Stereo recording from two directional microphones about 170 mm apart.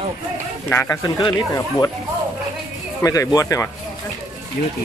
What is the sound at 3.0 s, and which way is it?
Speech, 20° left (ahead or behind).